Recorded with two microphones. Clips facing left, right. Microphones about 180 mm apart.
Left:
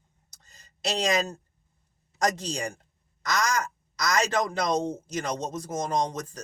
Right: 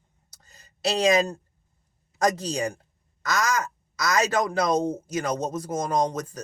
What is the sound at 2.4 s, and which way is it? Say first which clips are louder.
Speech: right 5 dB; 10° right (ahead or behind).